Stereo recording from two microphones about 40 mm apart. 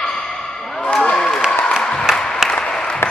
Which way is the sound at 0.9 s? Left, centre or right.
Centre.